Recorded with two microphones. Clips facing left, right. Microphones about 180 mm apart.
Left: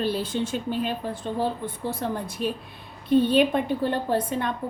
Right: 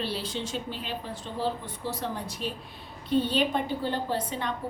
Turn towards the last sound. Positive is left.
turn(degrees=50)  # may be behind; listen again after turning